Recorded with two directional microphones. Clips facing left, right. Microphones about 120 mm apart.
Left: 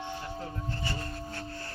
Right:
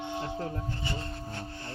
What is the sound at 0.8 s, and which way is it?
Music, 20° right (ahead or behind).